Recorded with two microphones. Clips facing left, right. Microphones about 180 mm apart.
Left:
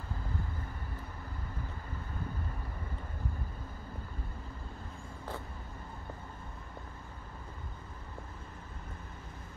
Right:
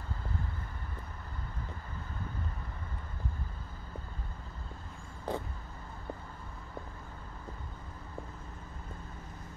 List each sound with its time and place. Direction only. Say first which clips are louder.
5.3 s vehicle: right 7 dB; 15° right (ahead or behind)